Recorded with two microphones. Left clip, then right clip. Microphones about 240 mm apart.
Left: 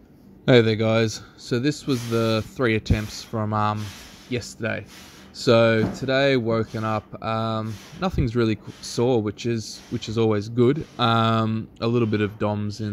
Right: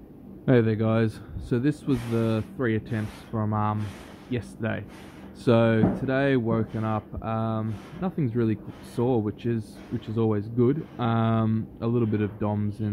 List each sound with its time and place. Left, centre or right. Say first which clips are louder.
0.5 s speech: left 5 dB; centre
4.3 s speech: left 4 dB; centre